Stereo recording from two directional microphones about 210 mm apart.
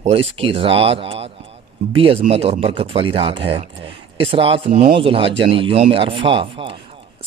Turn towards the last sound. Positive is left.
turn(degrees=-25)  # may be behind; listen again after turning